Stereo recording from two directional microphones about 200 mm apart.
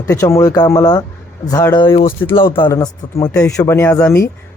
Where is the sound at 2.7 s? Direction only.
15° left (ahead or behind).